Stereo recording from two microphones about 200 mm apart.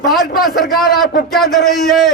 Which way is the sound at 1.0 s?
50° left (ahead or behind).